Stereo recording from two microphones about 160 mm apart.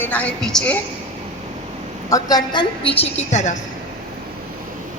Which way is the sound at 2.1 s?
25° left (ahead or behind).